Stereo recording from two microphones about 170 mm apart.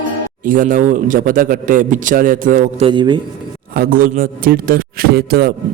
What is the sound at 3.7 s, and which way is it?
A man's voice, 60° right (ahead or behind).